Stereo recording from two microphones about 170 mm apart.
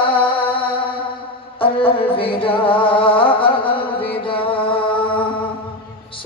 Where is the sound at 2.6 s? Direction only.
30° left (ahead or behind).